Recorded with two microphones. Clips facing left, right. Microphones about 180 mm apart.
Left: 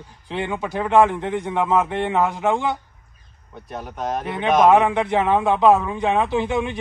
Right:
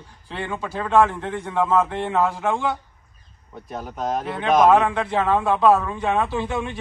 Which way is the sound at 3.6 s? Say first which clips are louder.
Even; centre (ahead or behind).